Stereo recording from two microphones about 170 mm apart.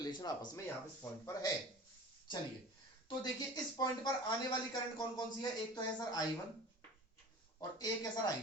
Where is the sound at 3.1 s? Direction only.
25° left (ahead or behind).